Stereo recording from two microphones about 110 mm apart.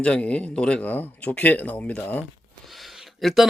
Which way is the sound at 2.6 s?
Centre (ahead or behind).